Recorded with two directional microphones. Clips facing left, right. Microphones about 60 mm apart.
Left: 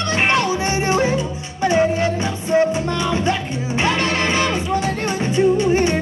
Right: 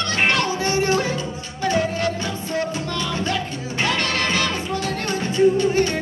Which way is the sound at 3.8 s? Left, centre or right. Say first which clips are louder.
Left 3 dB; left.